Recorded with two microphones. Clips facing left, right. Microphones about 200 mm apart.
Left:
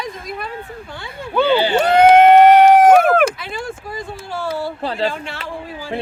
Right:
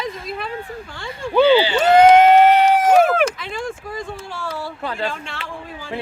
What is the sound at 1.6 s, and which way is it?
Speech, 55° left (ahead or behind).